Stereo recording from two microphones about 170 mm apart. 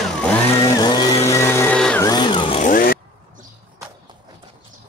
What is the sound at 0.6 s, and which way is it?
Vehicle, 25° left (ahead or behind).